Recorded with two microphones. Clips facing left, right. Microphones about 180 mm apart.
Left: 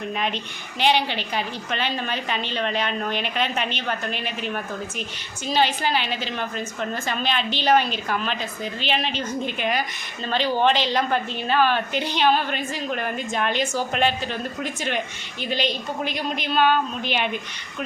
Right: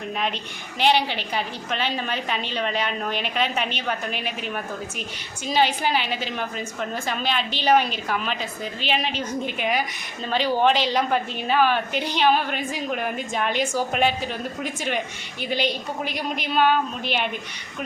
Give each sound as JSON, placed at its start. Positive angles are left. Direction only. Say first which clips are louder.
{"t": 0.8, "sound": "a woman's voice", "louder": "even", "side_deg": -5}